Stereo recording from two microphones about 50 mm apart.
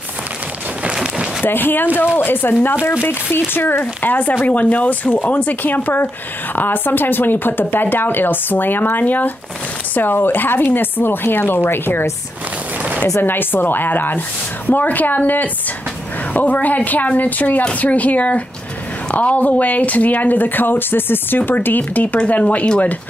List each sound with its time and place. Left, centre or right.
0.9 s a sound: centre
1.4 s speech: left
13.2 s speech: left